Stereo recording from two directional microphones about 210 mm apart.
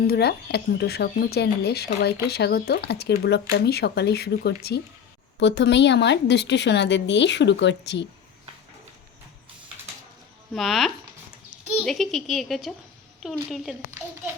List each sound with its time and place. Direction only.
0.1 s a woman's voice: 50° left (ahead or behind)
10.5 s speech: centre (ahead or behind)
11.5 s a sound: centre (ahead or behind)
11.9 s a woman's voice: centre (ahead or behind)